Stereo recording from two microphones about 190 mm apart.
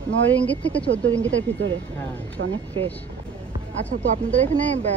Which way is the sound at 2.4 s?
70° right (ahead or behind).